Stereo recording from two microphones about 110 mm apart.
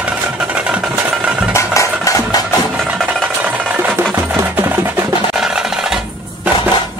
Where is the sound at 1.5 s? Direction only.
25° left (ahead or behind).